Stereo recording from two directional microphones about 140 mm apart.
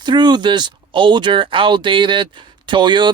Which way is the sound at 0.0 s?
30° right (ahead or behind).